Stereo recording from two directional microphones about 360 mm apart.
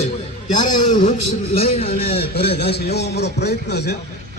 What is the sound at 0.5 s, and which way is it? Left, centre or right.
A man's voice, left.